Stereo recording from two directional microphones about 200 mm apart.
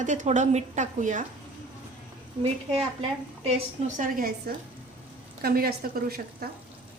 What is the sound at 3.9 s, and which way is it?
A woman's voice, 45° right (ahead or behind).